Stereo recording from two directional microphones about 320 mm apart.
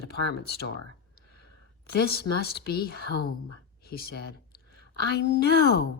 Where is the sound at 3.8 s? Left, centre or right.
Left.